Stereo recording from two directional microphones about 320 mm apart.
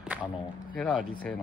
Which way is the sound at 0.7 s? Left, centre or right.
Centre.